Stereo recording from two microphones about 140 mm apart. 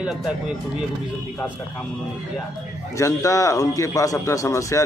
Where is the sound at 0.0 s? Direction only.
5° right (ahead or behind).